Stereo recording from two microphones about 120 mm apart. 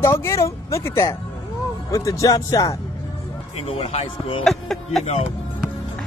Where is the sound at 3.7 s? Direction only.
50° left (ahead or behind).